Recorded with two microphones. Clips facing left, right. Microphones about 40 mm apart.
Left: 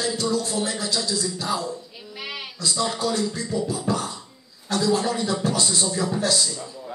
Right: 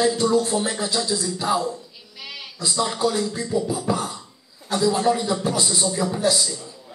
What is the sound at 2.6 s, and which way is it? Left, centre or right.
Speech, centre.